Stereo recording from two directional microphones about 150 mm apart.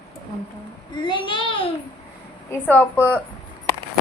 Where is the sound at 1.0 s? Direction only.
30° left (ahead or behind).